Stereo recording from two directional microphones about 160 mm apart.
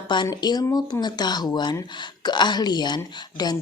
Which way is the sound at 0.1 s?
25° left (ahead or behind).